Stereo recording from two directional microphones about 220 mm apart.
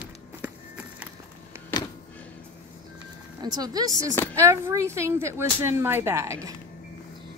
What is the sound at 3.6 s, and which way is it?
Speech, 15° right (ahead or behind).